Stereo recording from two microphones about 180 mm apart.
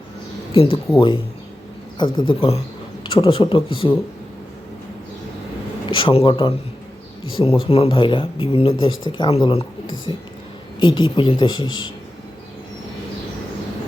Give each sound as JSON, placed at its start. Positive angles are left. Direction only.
{"t": 0.5, "sound": "speech", "side_deg": 30}
{"t": 5.9, "sound": "speech", "side_deg": 30}